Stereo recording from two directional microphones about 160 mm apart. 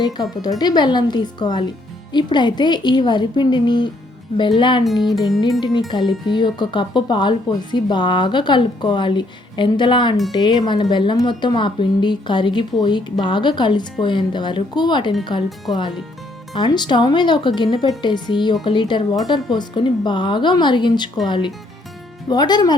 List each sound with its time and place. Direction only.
0.0 s speech: 25° left (ahead or behind)
4.9 s music: centre (ahead or behind)
5.4 s speech: 25° left (ahead or behind)